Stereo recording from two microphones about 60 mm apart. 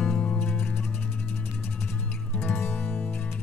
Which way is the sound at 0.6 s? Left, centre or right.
Left.